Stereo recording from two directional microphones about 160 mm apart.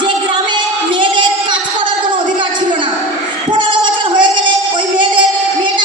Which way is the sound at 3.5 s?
30° right (ahead or behind).